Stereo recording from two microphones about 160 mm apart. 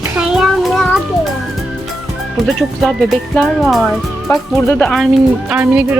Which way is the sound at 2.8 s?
Centre (ahead or behind).